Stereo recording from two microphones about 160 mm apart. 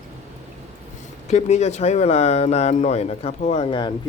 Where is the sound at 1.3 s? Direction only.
45° left (ahead or behind).